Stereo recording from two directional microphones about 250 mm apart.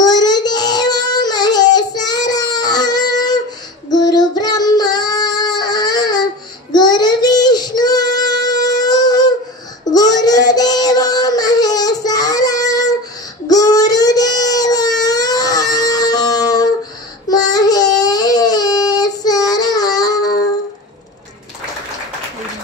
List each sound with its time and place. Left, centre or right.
0.0 s child singing: centre
9.9 s a sound: centre
17.3 s baby cry: centre